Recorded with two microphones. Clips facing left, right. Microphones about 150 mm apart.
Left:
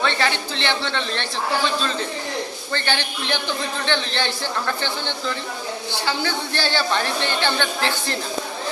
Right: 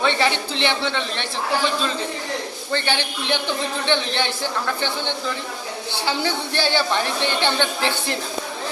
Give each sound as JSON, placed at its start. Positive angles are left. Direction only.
{"t": 0.0, "sound": "a woman's voice", "side_deg": -15}
{"t": 2.7, "sound": "a woman's voice", "side_deg": -15}
{"t": 6.1, "sound": "a woman's voice", "side_deg": -20}